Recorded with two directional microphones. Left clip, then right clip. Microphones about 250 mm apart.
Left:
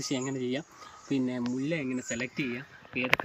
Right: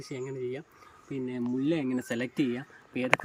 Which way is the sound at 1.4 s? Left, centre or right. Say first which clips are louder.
Right 2 dB; centre.